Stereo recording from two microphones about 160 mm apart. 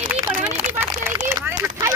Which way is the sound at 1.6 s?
15° right (ahead or behind).